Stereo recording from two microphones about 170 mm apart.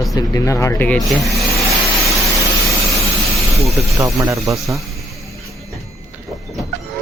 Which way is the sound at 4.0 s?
15° right (ahead or behind).